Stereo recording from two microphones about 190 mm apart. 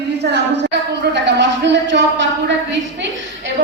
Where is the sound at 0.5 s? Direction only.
65° right (ahead or behind).